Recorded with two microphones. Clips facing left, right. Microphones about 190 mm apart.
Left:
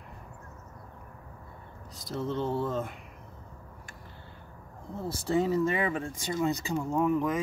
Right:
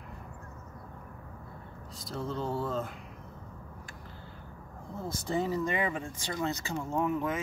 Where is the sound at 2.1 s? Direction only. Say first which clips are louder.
Left 3 dB; 20° left (ahead or behind).